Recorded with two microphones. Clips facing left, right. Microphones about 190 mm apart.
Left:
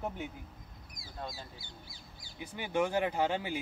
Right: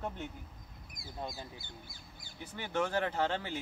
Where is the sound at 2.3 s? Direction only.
10° left (ahead or behind).